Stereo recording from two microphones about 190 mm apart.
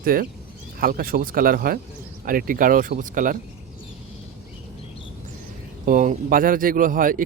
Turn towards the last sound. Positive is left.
turn(degrees=-45)  # may be behind; listen again after turning